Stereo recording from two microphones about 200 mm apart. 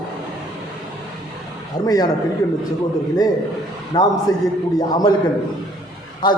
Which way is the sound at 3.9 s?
20° left (ahead or behind).